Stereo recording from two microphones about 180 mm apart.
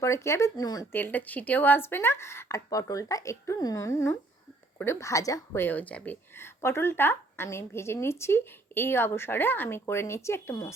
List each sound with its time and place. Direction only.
0.0 s speech: 15° left (ahead or behind)
0.9 s speech: 10° left (ahead or behind)